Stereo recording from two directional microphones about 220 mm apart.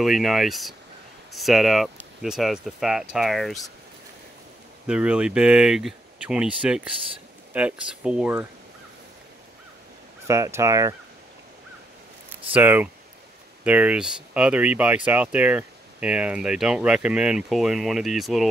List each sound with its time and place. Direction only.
0.0 s speech: centre (ahead or behind)
4.8 s speech: 5° right (ahead or behind)
10.2 s speech: 15° right (ahead or behind)
12.5 s speech: 5° right (ahead or behind)